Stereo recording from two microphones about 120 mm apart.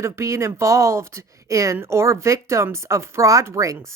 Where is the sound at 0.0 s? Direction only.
25° right (ahead or behind).